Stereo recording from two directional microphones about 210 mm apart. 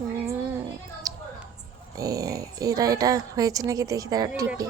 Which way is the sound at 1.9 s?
15° right (ahead or behind).